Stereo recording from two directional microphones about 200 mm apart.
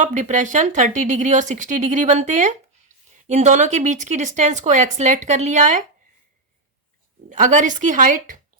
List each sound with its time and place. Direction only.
0.0 s speech: 40° right (ahead or behind)
7.3 s speech: 40° right (ahead or behind)